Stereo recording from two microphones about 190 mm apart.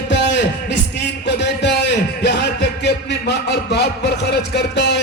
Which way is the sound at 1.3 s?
65° left (ahead or behind).